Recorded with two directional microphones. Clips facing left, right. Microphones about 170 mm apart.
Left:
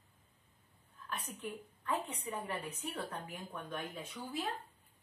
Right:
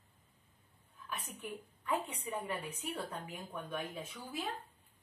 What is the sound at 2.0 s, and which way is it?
Speech, 10° right (ahead or behind).